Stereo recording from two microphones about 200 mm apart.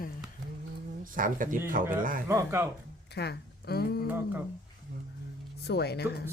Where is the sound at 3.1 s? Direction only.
55° left (ahead or behind).